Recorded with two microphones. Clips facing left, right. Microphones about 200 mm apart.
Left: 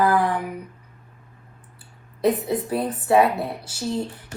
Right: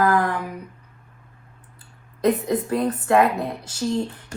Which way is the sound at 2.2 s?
10° left (ahead or behind).